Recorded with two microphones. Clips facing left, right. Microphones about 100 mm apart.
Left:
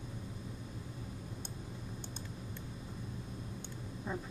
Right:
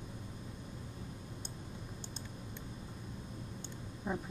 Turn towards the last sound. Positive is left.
turn(degrees=-15)  # may be behind; listen again after turning